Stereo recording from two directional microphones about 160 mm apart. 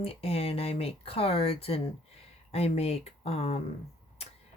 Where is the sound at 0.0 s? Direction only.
35° left (ahead or behind).